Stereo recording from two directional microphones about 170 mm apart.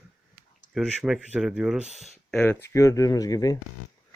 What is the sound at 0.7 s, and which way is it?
Speech, 5° right (ahead or behind).